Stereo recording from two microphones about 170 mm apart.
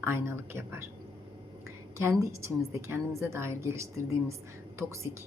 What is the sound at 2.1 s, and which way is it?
A woman's voice, 15° right (ahead or behind).